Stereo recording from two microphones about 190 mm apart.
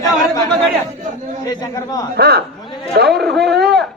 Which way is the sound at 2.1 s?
55° right (ahead or behind).